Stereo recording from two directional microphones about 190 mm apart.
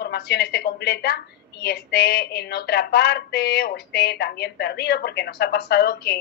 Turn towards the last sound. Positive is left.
turn(degrees=60)  # may be behind; listen again after turning